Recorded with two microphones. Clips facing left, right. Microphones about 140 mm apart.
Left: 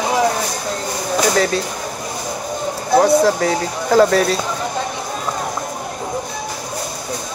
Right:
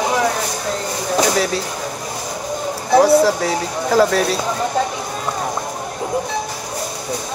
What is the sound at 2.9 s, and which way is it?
Speech, 5° right (ahead or behind).